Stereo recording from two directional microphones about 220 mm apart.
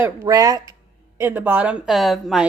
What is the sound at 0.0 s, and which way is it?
A woman's voice, 15° right (ahead or behind).